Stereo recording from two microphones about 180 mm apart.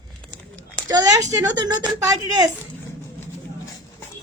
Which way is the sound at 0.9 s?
20° right (ahead or behind).